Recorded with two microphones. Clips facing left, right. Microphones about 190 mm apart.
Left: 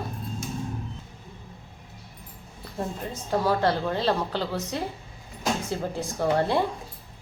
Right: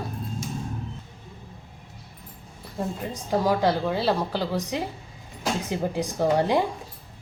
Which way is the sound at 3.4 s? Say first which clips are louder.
Right 1 dB; 10° right (ahead or behind).